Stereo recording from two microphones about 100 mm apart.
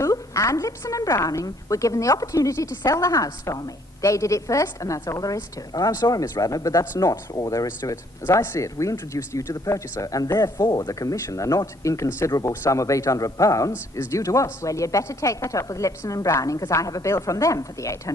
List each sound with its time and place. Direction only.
0.0 s a woman's voice: 30° left (ahead or behind)